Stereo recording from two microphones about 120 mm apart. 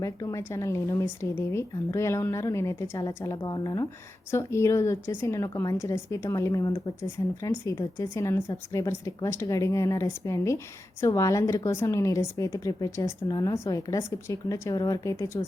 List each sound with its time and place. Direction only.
0.0 s a woman's voice: 30° left (ahead or behind)
3.4 s a woman's voice: 35° left (ahead or behind)